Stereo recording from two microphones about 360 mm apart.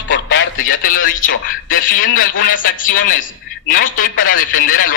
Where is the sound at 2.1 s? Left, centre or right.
Left.